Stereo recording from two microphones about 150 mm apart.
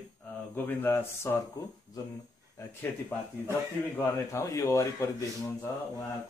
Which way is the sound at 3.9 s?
20° left (ahead or behind).